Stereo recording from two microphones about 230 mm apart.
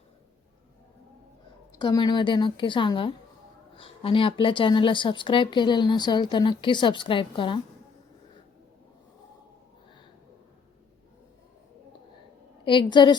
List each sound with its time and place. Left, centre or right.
1.7 s speech: centre
12.6 s speech: left